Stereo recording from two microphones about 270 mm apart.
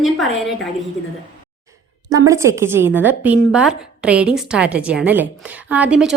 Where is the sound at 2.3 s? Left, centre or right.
Centre.